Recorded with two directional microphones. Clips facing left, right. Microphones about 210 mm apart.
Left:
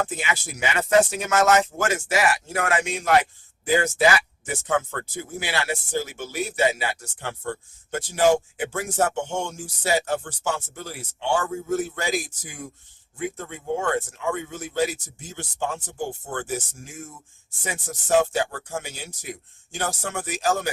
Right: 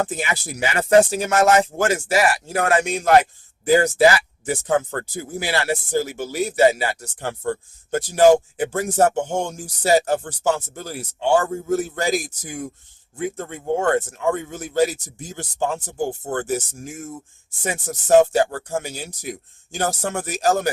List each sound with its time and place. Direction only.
0.0 s speech: 35° right (ahead or behind)
4.4 s speech: 35° right (ahead or behind)
13.3 s speech: 45° right (ahead or behind)